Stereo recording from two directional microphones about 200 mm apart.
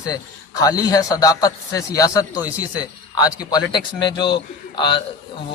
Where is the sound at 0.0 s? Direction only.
15° left (ahead or behind).